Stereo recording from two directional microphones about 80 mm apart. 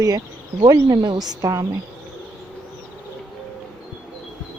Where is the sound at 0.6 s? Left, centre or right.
Right.